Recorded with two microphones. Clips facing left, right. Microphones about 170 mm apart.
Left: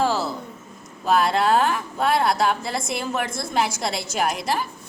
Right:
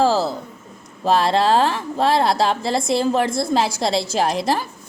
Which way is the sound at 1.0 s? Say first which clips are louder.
Right 3 dB; 30° right (ahead or behind).